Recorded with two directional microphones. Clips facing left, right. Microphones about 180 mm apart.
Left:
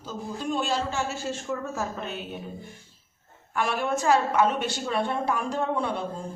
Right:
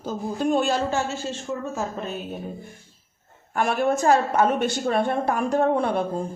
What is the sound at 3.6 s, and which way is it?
A woman's voice, 50° right (ahead or behind).